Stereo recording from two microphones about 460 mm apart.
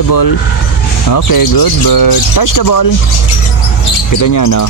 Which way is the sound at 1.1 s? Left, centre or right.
Left.